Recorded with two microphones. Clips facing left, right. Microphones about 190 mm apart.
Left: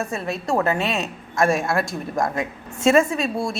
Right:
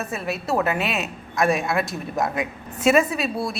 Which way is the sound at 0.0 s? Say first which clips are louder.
Left 1 dB; centre (ahead or behind).